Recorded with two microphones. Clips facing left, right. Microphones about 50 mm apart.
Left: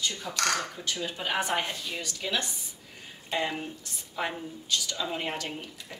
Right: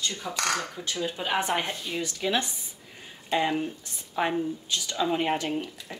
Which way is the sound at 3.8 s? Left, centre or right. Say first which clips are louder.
Right 5 dB; right.